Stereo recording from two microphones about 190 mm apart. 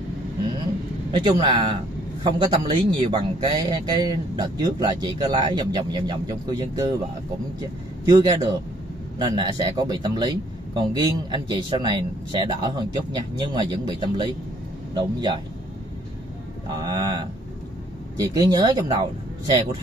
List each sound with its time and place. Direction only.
1.1 s a man's voice: 20° right (ahead or behind)
8.0 s a man's voice: 20° right (ahead or behind)
16.6 s a man's voice: 20° right (ahead or behind)